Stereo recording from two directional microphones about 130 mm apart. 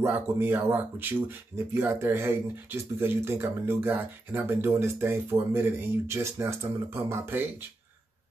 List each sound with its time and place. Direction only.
0.0 s speech: 15° right (ahead or behind)